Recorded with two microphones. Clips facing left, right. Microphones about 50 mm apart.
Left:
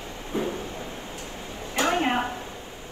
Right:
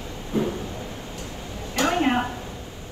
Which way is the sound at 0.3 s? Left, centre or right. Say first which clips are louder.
Right 3 dB; left.